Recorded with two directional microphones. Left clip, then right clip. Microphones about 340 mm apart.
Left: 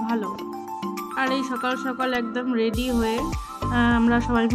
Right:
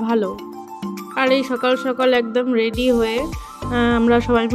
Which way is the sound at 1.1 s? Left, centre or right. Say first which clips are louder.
Right 8 dB; centre.